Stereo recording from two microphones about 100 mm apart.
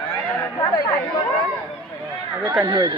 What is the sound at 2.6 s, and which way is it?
Speech, 40° right (ahead or behind).